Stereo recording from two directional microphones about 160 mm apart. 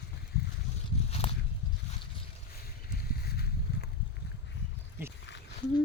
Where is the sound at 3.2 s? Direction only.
80° left.